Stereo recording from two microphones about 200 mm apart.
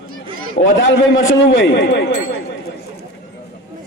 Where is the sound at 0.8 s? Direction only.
70° left (ahead or behind).